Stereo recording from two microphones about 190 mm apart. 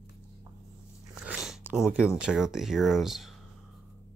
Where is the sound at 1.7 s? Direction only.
5° right (ahead or behind).